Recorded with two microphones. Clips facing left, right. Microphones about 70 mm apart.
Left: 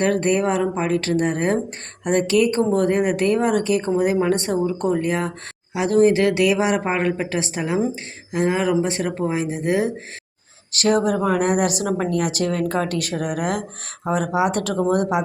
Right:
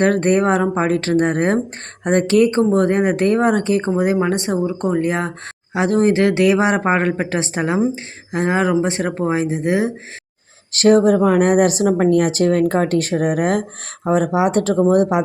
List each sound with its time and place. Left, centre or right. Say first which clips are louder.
0.0 s speech: right 4 dB; right
10.7 s speech: right 6 dB; right